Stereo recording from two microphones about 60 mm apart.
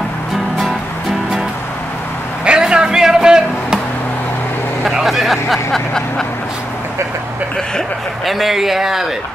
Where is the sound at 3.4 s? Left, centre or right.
Left.